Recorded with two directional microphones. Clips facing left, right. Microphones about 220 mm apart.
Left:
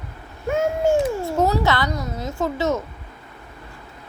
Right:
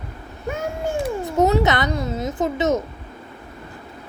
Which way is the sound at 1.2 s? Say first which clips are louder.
Right 2 dB; 20° right (ahead or behind).